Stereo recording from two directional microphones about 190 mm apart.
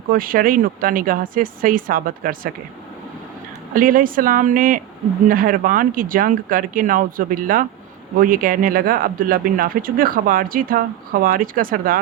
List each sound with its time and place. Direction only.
0.1 s speech: 50° right (ahead or behind)
3.8 s speech: 45° right (ahead or behind)